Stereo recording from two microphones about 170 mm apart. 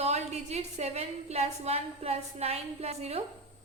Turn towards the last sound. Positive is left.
turn(degrees=-40)  # may be behind; listen again after turning